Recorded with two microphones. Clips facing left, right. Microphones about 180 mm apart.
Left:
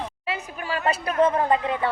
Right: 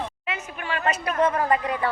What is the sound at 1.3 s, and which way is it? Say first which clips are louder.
Speech: left 1 dB; 25° left (ahead or behind).